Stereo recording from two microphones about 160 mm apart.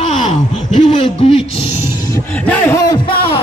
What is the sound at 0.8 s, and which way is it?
Speech, 40° left (ahead or behind).